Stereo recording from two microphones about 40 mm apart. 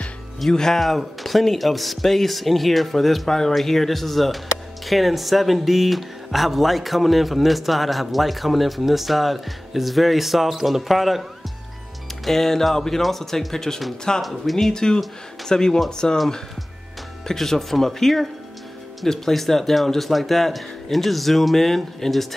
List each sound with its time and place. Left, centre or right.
0.5 s speech: centre
12.3 s speech: centre
14.7 s speech: centre
17.3 s speech: centre